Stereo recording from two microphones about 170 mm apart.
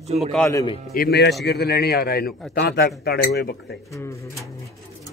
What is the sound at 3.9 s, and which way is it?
Speech, 15° left (ahead or behind).